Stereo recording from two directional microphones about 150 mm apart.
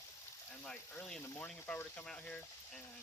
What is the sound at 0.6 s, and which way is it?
Speech, 10° left (ahead or behind).